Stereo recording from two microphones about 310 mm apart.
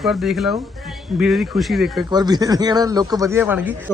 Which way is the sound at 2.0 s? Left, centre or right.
Centre.